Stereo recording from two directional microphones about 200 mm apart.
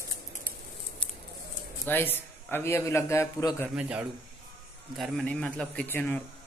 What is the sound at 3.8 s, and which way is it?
A man's voice, 5° right (ahead or behind).